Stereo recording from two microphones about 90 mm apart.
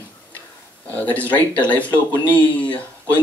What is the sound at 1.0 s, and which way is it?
Speech, 15° left (ahead or behind).